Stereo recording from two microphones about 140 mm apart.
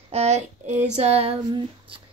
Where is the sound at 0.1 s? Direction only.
50° right (ahead or behind).